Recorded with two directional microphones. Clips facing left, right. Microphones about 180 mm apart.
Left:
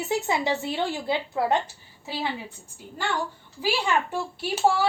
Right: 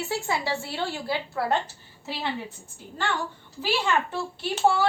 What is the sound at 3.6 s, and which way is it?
Speech, 10° left (ahead or behind).